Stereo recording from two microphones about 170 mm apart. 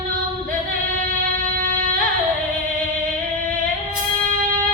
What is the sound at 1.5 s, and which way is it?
Music, 55° right (ahead or behind).